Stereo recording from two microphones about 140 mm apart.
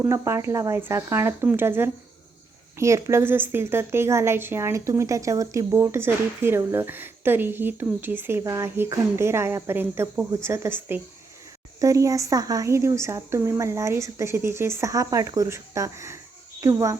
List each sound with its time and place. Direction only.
0.0 s a woman's voice: 20° right (ahead or behind)